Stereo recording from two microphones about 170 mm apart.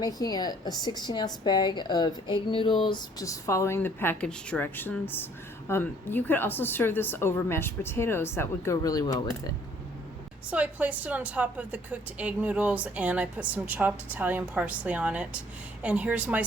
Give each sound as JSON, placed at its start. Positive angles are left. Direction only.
{"t": 0.0, "sound": "a woman's voice", "side_deg": 20}
{"t": 10.5, "sound": "a woman's voice", "side_deg": -10}